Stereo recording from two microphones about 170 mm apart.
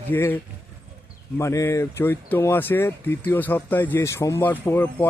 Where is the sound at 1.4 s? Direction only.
15° left (ahead or behind).